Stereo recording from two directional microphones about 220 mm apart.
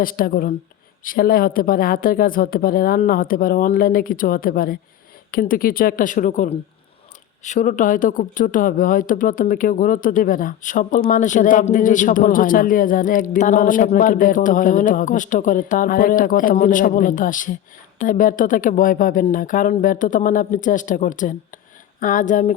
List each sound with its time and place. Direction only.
0.0 s a man's voice: 40° left (ahead or behind)